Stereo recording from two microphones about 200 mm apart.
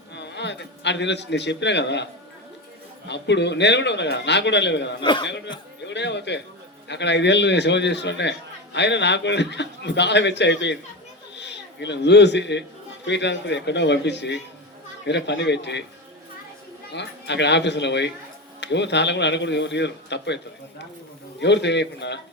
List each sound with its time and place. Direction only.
0.1 s a man's voice: 60° left (ahead or behind)
3.1 s a man's voice: 60° left (ahead or behind)
5.0 s speech: 25° left (ahead or behind)
5.8 s a man's voice: 60° left (ahead or behind)
16.9 s a man's voice: 60° left (ahead or behind)